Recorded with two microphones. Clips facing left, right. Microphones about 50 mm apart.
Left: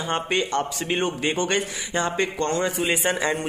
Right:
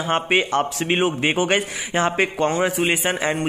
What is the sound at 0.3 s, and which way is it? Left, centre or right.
Speech, right.